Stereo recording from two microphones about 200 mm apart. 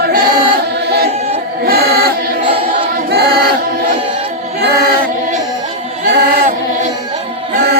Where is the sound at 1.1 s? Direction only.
35° right (ahead or behind).